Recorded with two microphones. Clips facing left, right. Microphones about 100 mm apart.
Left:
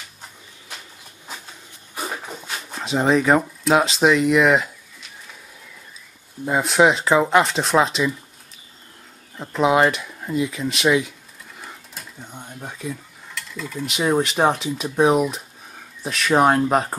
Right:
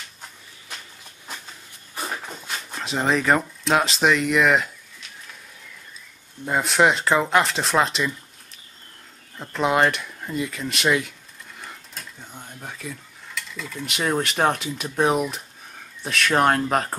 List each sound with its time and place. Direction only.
2.0 s a sound: 5° left (ahead or behind)
6.4 s speech: centre (ahead or behind)
9.4 s speech: 5° left (ahead or behind)
11.6 s sewing machine: 5° left (ahead or behind)
12.3 s speech: 15° left (ahead or behind)